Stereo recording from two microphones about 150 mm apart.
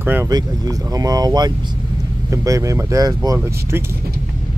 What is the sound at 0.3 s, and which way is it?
Speech, 25° right (ahead or behind).